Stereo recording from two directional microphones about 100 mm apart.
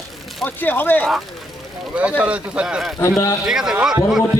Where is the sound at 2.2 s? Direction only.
10° right (ahead or behind).